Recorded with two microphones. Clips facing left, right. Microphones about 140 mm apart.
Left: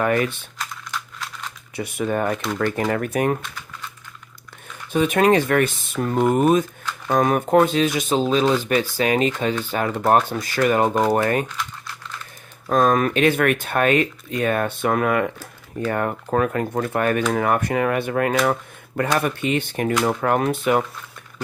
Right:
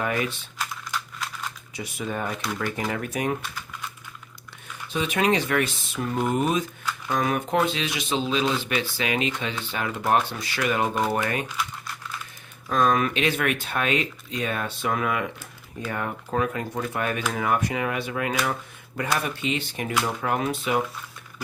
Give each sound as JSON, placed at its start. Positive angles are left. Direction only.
{"t": 0.0, "sound": "speech", "side_deg": 55}
{"t": 0.6, "sound": "computer keyboard", "side_deg": -5}
{"t": 1.7, "sound": "speech", "side_deg": 55}
{"t": 3.4, "sound": "typing", "side_deg": -10}
{"t": 4.9, "sound": "speech", "side_deg": 50}
{"t": 11.4, "sound": "crumpling", "side_deg": -10}
{"t": 12.6, "sound": "speech", "side_deg": 45}